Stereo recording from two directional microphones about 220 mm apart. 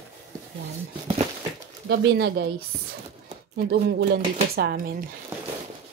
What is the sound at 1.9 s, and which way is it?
Speech, 50° right (ahead or behind).